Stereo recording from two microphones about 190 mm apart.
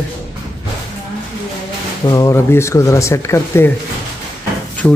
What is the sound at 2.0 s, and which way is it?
A man's voice, 15° left (ahead or behind).